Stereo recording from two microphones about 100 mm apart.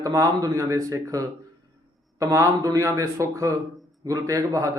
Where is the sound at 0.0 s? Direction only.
35° right (ahead or behind).